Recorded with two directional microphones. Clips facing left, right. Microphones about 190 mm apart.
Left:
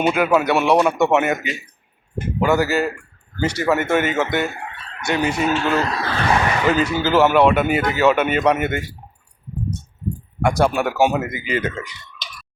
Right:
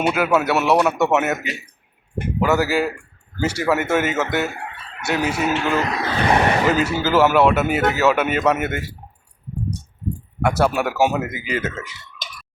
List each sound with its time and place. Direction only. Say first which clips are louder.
0.1 s speech: left 1 dB; 5° right (ahead or behind)
5.7 s speech: even; 20° right (ahead or behind)
6.7 s speech: left 1 dB; 10° right (ahead or behind)
10.4 s speech: left 1 dB; 5° right (ahead or behind)
12.2 s chicken: right 1 dB; 50° right (ahead or behind)